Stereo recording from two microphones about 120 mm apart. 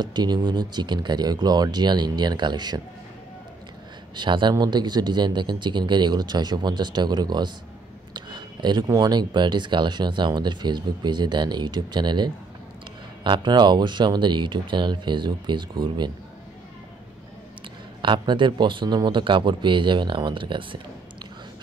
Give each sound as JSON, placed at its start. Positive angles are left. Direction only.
{"t": 0.0, "sound": "speech", "side_deg": -35}
{"t": 4.1, "sound": "speech", "side_deg": -40}
{"t": 18.0, "sound": "speech", "side_deg": -40}